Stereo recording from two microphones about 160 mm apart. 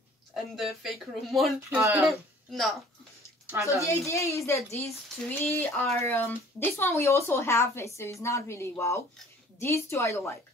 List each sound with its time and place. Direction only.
0.3 s speech: centre (ahead or behind)
1.8 s speech: 15° right (ahead or behind)
2.0 s speech: centre (ahead or behind)
3.8 s speech: 20° left (ahead or behind)